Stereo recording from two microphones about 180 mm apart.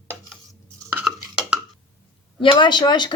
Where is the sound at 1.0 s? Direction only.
5° right (ahead or behind).